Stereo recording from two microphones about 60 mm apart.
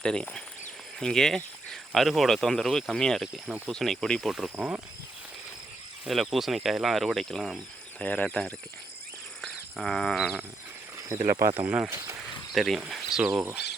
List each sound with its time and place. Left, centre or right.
0.0 s speech: centre
4.5 s speech: right
6.1 s speech: centre
7.9 s speech: left
9.7 s speech: centre
11.2 s speech: right
11.6 s speech: right
11.9 s speech: right
12.5 s speech: centre